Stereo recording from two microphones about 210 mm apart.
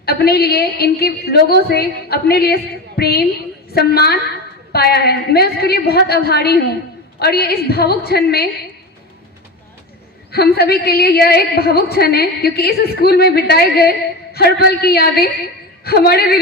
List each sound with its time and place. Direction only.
0.0 s a woman's voice: 50° left (ahead or behind)
10.3 s a woman's voice: 50° left (ahead or behind)